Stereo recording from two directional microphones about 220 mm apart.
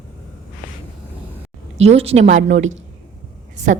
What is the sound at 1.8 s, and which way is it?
Speech, 30° right (ahead or behind).